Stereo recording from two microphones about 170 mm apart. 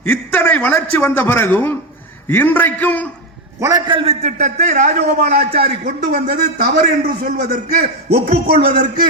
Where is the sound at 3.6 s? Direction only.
25° right (ahead or behind); by 6.3 s 50° right (ahead or behind).